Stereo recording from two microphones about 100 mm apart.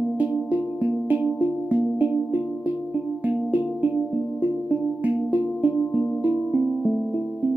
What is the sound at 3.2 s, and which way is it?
Music, 15° right (ahead or behind).